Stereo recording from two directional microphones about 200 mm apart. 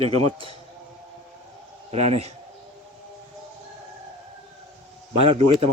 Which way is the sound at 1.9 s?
30° right (ahead or behind).